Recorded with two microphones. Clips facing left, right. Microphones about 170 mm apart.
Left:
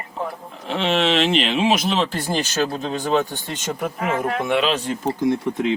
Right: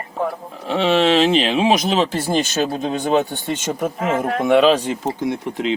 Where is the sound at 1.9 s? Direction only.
5° right (ahead or behind).